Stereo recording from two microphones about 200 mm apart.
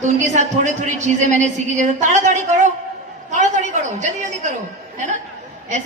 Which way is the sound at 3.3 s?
40° right (ahead or behind).